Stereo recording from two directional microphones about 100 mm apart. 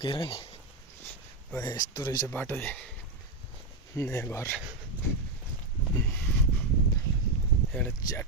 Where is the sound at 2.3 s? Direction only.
20° left (ahead or behind).